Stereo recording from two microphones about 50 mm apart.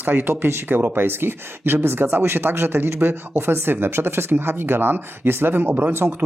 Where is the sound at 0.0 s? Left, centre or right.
Right.